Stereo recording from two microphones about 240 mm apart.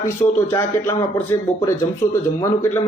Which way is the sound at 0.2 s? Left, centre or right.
Left.